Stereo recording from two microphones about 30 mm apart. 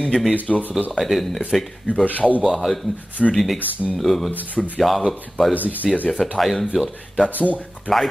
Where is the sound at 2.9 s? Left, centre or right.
Left.